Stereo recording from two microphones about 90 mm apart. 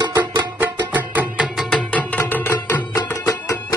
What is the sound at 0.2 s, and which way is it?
Music, 55° right (ahead or behind).